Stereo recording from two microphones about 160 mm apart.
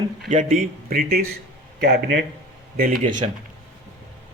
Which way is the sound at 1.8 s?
80° right.